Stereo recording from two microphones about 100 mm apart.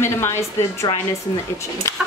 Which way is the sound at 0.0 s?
25° left (ahead or behind).